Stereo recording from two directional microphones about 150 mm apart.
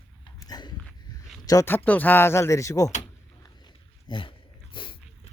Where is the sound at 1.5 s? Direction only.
20° left (ahead or behind).